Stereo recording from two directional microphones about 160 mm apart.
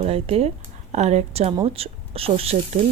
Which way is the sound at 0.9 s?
45° right (ahead or behind).